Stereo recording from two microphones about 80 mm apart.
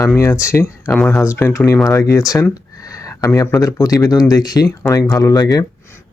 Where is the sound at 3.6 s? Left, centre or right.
Left.